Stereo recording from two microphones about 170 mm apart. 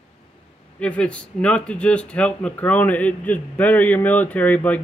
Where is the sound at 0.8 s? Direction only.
5° left (ahead or behind).